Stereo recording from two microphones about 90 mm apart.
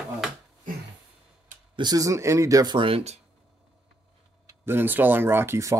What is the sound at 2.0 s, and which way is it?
Speech, 35° right (ahead or behind).